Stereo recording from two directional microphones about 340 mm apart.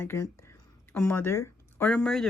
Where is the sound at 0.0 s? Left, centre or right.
Centre.